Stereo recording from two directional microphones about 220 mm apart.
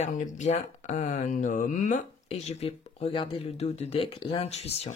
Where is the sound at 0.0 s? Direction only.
30° left (ahead or behind).